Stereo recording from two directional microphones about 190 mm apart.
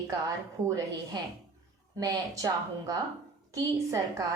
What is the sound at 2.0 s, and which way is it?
A woman's voice, 20° right (ahead or behind).